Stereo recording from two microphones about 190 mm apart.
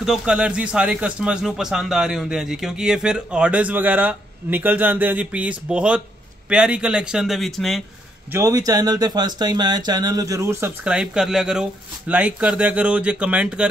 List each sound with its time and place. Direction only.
0.0 s speech: 5° right (ahead or behind)
8.3 s speech: 15° right (ahead or behind)